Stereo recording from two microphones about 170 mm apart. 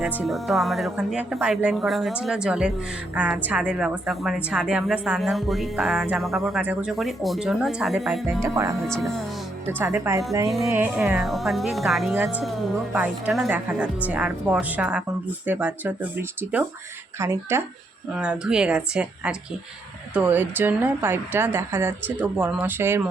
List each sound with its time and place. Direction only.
0.0 s a woman's voice: centre (ahead or behind)
8.4 s speech: 20° right (ahead or behind)
8.9 s a woman's voice: centre (ahead or behind)
9.6 s a woman's voice: 15° right (ahead or behind)